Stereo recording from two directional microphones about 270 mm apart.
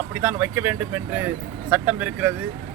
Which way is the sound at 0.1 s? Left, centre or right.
Centre.